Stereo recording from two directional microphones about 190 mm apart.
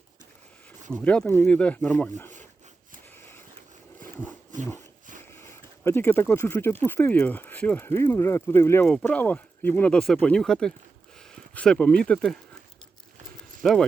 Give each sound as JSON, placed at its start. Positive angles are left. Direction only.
{"t": 0.9, "sound": "speech", "side_deg": 5}
{"t": 3.2, "sound": "a sound", "side_deg": 10}
{"t": 5.3, "sound": "speech", "side_deg": 10}
{"t": 13.6, "sound": "speech", "side_deg": 0}